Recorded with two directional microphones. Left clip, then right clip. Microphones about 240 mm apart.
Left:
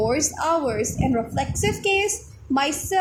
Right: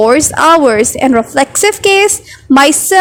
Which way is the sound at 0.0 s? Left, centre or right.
Right.